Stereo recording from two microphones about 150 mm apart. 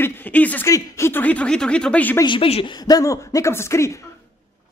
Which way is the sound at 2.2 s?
35° left (ahead or behind).